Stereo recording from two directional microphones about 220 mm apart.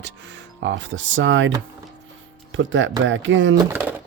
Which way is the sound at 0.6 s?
55° right (ahead or behind).